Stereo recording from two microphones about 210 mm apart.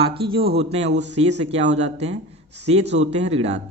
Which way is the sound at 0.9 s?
55° right (ahead or behind).